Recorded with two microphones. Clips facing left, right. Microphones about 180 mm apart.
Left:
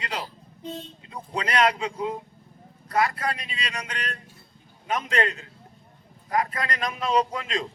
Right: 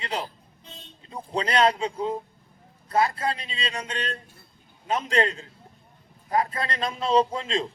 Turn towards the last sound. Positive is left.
turn(degrees=-30)  # may be behind; listen again after turning